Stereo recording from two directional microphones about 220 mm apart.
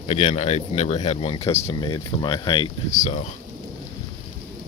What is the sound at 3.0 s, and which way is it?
Speech, 30° left (ahead or behind).